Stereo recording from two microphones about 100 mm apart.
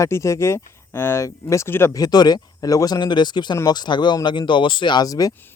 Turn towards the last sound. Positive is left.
turn(degrees=40)  # may be behind; listen again after turning